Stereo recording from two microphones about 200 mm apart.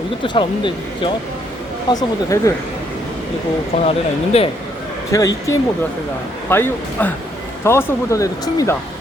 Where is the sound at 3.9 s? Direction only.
30° left (ahead or behind).